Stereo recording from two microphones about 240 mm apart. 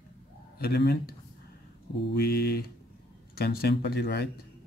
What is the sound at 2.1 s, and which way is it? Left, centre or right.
Speech, left.